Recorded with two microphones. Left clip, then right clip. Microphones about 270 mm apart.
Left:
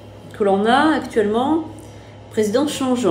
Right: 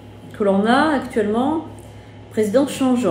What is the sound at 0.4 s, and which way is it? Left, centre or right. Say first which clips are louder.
A woman's voice: left 1 dB; centre.